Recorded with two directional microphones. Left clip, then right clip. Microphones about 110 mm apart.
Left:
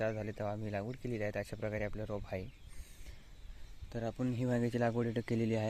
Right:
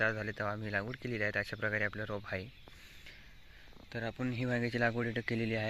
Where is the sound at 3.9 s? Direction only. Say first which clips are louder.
Even; 55° left (ahead or behind).